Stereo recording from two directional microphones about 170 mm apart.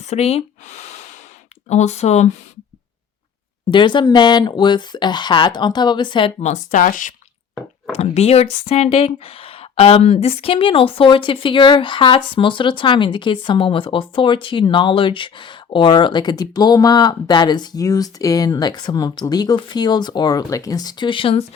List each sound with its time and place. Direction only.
0.0 s speech: 40° left (ahead or behind)
3.7 s speech: 25° left (ahead or behind)
6.4 s speech: 45° left (ahead or behind)
7.9 s speech: 40° left (ahead or behind)